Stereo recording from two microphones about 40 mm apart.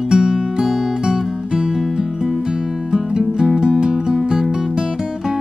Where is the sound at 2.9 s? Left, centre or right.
Centre.